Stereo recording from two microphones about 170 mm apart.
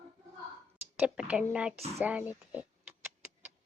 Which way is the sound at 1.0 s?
5° right (ahead or behind).